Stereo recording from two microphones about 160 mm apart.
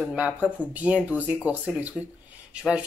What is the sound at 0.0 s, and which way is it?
Speech, 5° right (ahead or behind).